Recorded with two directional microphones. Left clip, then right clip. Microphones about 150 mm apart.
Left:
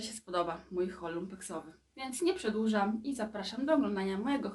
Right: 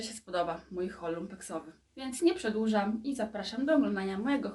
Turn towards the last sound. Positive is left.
turn(degrees=20)  # may be behind; listen again after turning